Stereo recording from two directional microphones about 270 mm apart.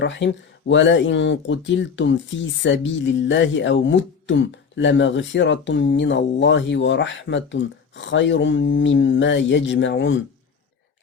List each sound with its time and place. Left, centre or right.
0.2 s speech: left